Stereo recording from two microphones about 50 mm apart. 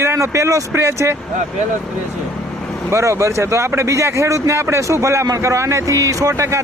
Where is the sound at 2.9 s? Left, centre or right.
Right.